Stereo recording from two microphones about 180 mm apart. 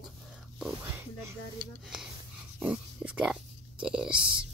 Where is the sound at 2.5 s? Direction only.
5° right (ahead or behind).